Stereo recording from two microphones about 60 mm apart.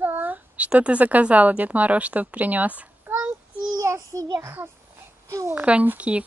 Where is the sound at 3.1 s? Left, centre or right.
Right.